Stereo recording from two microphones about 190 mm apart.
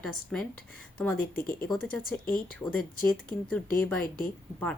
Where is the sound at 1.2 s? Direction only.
50° left (ahead or behind).